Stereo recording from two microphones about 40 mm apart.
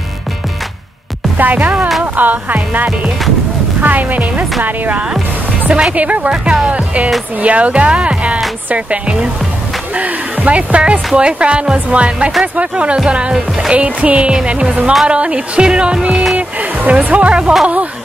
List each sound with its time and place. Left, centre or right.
1.4 s music: right
5.7 s speech: right
5.9 s speech: right
6.7 s speech: right
9.9 s speech: right
16.3 s music: right
17.0 s speech: right